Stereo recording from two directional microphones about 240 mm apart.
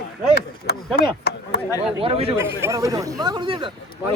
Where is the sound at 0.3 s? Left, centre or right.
Left.